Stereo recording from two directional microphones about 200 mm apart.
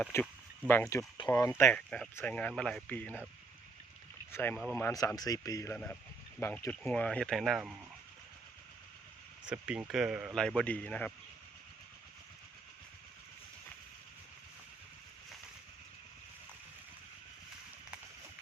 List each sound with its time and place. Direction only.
0.0 s speech: 10° left (ahead or behind)
4.3 s speech: 10° left (ahead or behind)
9.5 s speech: 5° right (ahead or behind)